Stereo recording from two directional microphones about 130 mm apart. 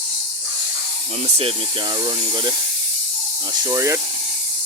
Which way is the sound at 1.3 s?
45° right (ahead or behind).